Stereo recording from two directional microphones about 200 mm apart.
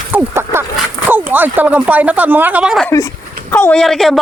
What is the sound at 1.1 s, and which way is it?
Speech, 10° right (ahead or behind).